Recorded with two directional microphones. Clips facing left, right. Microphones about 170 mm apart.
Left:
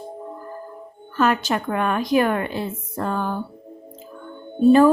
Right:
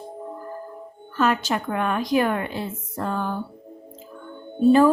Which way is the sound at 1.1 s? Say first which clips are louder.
Left 2 dB; 55° left (ahead or behind).